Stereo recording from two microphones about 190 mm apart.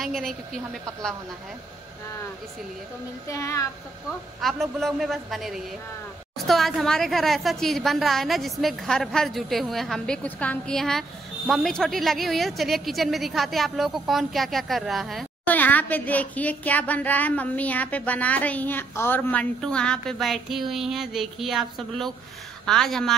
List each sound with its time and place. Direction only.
0.0 s a woman's voice: centre (ahead or behind)
3.3 s a child's voice: 15° left (ahead or behind)
4.4 s a woman's voice: centre (ahead or behind)